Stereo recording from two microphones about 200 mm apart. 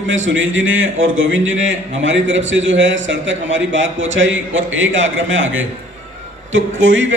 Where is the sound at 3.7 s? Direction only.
70° right (ahead or behind).